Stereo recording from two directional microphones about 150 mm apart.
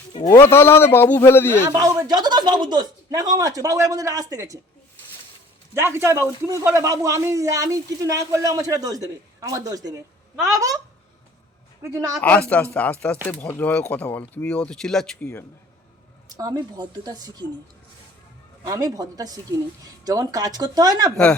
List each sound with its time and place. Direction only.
0.3 s speech: 15° left (ahead or behind)
1.7 s speech: 25° right (ahead or behind)
5.7 s speech: 15° right (ahead or behind)
12.2 s speech: 10° left (ahead or behind)
16.4 s speech: 25° right (ahead or behind)
18.6 s speech: 25° right (ahead or behind)